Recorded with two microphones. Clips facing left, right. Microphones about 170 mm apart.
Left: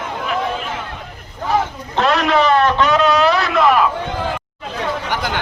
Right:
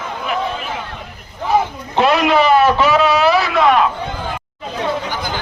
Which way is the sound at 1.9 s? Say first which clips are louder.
Right 2 dB; 5° right (ahead or behind).